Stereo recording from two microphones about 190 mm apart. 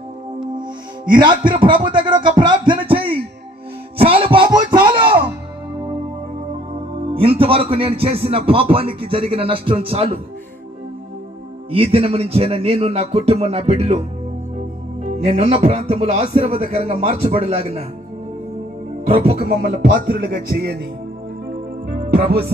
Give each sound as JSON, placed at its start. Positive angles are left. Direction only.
{"t": 1.4, "sound": "a man's voice", "side_deg": -25}
{"t": 4.0, "sound": "music", "side_deg": -30}
{"t": 7.0, "sound": "a man's voice", "side_deg": -30}
{"t": 11.7, "sound": "speech", "side_deg": -30}
{"t": 15.0, "sound": "speech", "side_deg": -35}
{"t": 19.0, "sound": "speech", "side_deg": -30}
{"t": 19.4, "sound": "music", "side_deg": -50}
{"t": 21.8, "sound": "music", "side_deg": -55}